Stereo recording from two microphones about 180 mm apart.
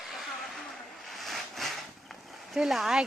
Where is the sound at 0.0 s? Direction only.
Centre (ahead or behind).